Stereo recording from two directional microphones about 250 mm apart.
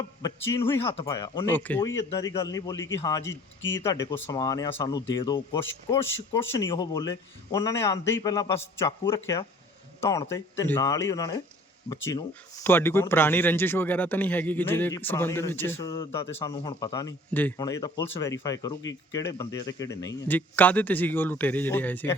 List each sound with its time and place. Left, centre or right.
0.2 s a man's voice: centre
3.6 s speech: left
3.8 s speech: centre